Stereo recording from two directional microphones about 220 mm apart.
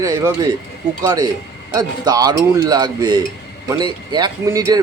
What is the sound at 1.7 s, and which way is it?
A man's voice, 15° right (ahead or behind).